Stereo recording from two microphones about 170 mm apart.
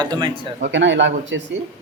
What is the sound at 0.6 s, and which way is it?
Speech, 90° right.